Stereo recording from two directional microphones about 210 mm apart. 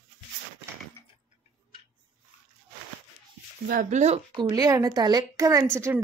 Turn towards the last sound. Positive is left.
turn(degrees=-10)  # may be behind; listen again after turning